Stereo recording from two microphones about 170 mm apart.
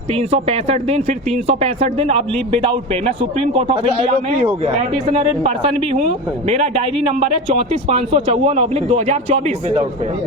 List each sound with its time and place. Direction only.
0.1 s a man's voice: 35° right (ahead or behind)